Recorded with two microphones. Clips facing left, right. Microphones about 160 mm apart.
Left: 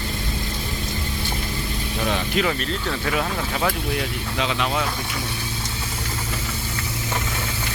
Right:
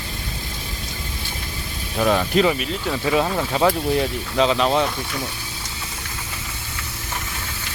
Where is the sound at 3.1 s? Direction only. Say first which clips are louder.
Right 6 dB; 30° right (ahead or behind).